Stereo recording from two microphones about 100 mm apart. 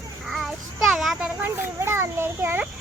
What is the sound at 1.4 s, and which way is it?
A child's voice, 25° right (ahead or behind).